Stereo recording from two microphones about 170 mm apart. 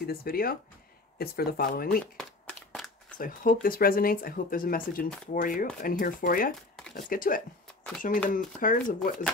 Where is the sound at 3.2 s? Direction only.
55° left (ahead or behind).